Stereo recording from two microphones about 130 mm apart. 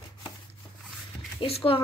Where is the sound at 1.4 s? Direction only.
45° left (ahead or behind).